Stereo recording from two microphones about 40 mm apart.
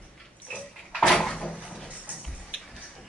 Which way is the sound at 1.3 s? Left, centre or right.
Left.